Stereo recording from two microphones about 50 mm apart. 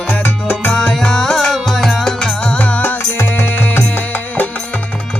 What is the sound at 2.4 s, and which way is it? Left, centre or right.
Music, left.